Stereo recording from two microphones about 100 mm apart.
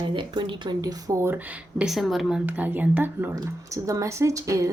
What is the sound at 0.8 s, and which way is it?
Speech, 35° right (ahead or behind).